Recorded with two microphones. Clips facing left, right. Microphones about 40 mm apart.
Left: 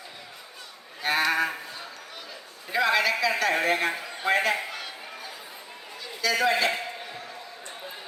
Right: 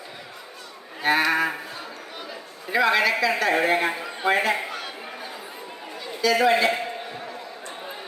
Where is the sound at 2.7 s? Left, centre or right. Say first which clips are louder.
Right 3 dB; centre.